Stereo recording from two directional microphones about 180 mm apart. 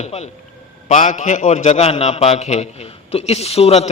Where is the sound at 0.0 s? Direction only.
35° left (ahead or behind).